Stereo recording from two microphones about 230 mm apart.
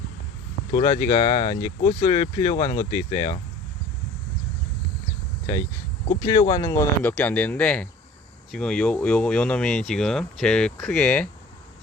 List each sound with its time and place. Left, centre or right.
0.7 s speech: centre
6.1 s speech: centre